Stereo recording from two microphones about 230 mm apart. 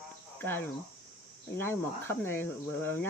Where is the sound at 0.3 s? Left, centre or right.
Centre.